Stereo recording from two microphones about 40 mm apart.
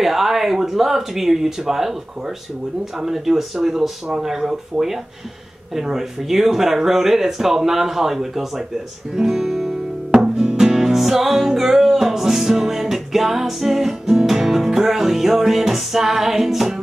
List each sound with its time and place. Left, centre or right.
0.0 s speech: centre
10.3 s music: centre